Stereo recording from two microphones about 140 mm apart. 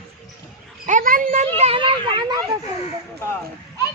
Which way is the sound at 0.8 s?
70° right (ahead or behind).